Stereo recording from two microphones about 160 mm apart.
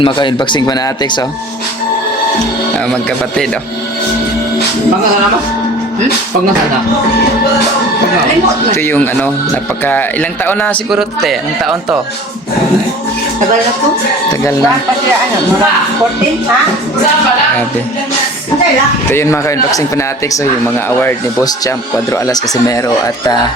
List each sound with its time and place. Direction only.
0.0 s speech: 30° left (ahead or behind)
2.7 s a man's voice: 5° left (ahead or behind)
8.7 s a man's voice: 15° left (ahead or behind)
10.9 s a man's voice: centre (ahead or behind)
19.1 s a man's voice: 20° left (ahead or behind)
22.1 s speech: 20° left (ahead or behind)